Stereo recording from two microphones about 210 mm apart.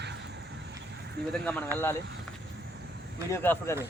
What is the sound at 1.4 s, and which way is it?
Speech, 5° left (ahead or behind).